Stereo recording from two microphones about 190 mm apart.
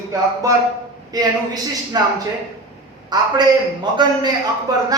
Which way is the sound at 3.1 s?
25° right (ahead or behind).